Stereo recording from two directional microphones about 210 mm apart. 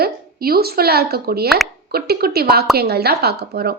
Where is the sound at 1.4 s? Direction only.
Centre (ahead or behind).